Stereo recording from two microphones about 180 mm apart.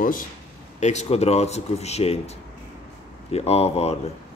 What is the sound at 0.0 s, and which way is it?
Speech, 50° left (ahead or behind).